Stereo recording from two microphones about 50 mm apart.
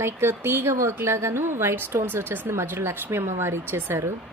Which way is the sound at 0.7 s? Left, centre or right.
Right.